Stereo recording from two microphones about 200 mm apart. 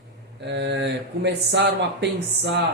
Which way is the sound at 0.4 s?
60° right (ahead or behind).